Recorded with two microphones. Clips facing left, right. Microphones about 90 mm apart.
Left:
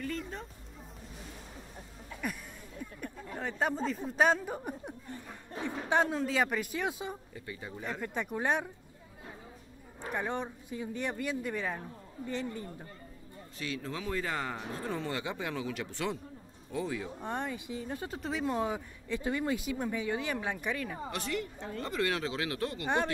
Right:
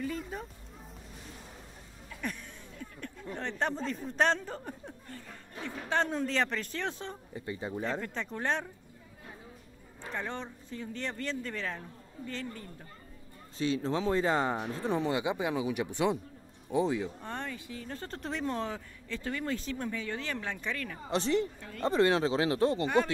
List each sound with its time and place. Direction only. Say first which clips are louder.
0.0 s a sound: right 1 dB; 5° right (ahead or behind)
2.2 s speech: even; 10° left (ahead or behind)
2.8 s chatter: left 2 dB; 10° left (ahead or behind)
3.3 s speech: left 1 dB; 5° left (ahead or behind)
6.0 s speech: left 1 dB; 5° left (ahead or behind)
7.3 s speech: right 6 dB; 30° right (ahead or behind)
8.0 s speech: left 2 dB; 15° left (ahead or behind)
10.0 s speech: left 3 dB; 15° left (ahead or behind)
13.6 s speech: right 8 dB; 25° right (ahead or behind)
17.2 s speech: left 3 dB; 15° left (ahead or behind)
21.1 s speech: right 10 dB; 30° right (ahead or behind)
21.5 s speech: left 5 dB; 25° left (ahead or behind)
21.8 s speech: right 7 dB; 30° right (ahead or behind)